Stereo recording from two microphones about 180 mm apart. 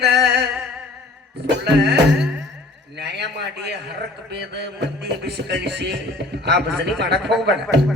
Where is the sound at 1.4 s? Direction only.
70° right (ahead or behind).